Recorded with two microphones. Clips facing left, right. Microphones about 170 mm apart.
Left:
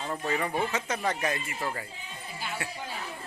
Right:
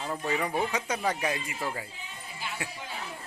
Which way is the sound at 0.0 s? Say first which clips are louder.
Even; 5° right (ahead or behind).